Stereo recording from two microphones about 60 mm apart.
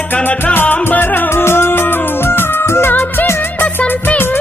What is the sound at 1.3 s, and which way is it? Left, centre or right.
Music, left.